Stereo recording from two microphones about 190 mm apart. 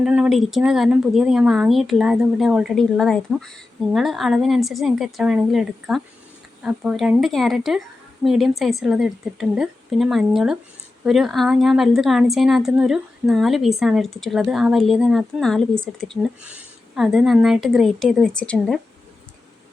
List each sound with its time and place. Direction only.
0.0 s speech: 5° right (ahead or behind)